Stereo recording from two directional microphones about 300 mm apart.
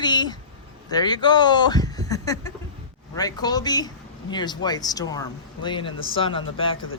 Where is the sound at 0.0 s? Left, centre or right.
Centre.